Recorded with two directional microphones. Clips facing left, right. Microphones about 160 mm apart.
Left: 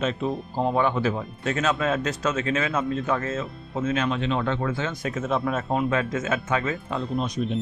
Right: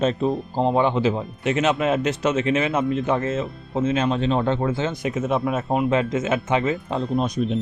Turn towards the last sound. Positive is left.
turn(degrees=-55)  # may be behind; listen again after turning